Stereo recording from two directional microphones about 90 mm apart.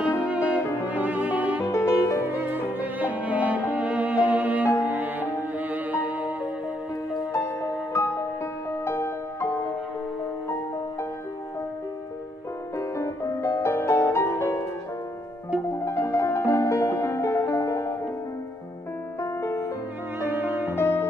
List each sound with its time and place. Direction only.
0.3 s music: 15° right (ahead or behind)
1.7 s music: 35° left (ahead or behind)
2.2 s music: 20° right (ahead or behind)
7.3 s music: 30° left (ahead or behind)
12.7 s music: 30° left (ahead or behind)
15.8 s music: 30° left (ahead or behind)
19.2 s music: 35° left (ahead or behind)
20.2 s music: 25° right (ahead or behind)
20.7 s music: 25° left (ahead or behind)